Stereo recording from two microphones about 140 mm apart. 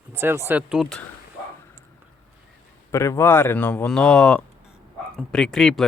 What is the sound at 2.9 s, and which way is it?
Speech, 20° left (ahead or behind).